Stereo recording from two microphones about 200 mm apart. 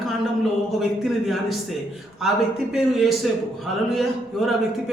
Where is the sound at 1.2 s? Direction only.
Centre (ahead or behind).